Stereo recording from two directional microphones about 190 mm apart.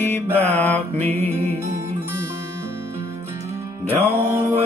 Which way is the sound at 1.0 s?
35° right (ahead or behind).